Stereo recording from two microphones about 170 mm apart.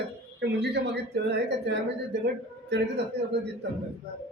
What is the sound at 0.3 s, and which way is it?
A man's voice, 90° right.